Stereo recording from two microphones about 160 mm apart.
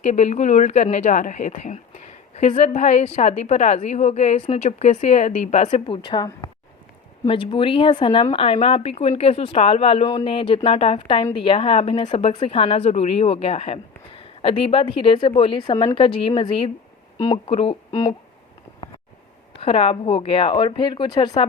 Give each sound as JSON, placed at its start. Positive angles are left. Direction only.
{"t": 0.0, "sound": "a woman's voice", "side_deg": 45}
{"t": 19.5, "sound": "speech", "side_deg": 35}